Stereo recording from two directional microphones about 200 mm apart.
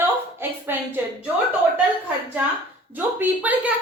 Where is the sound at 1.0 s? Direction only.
10° right (ahead or behind).